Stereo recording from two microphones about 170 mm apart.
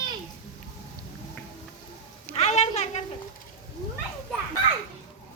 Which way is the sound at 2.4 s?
40° left (ahead or behind).